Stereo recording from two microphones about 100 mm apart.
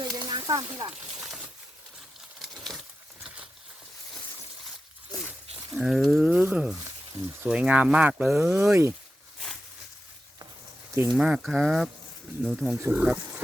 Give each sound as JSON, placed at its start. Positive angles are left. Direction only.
{"t": 0.0, "sound": "a sound", "side_deg": -45}
{"t": 0.8, "sound": "speech", "side_deg": -40}
{"t": 5.7, "sound": "speech", "side_deg": -5}
{"t": 8.4, "sound": "speech", "side_deg": -25}
{"t": 11.2, "sound": "speech", "side_deg": -5}
{"t": 12.7, "sound": "speech", "side_deg": -25}
{"t": 13.0, "sound": "speech", "side_deg": -10}